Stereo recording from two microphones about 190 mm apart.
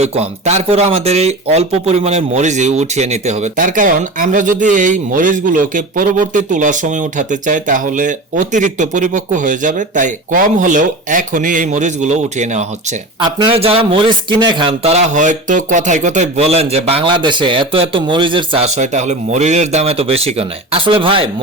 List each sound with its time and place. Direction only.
0.0 s speech: 35° right (ahead or behind)